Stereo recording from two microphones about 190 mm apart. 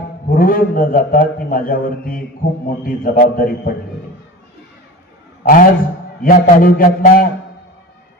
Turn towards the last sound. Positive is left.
turn(degrees=45)  # may be behind; listen again after turning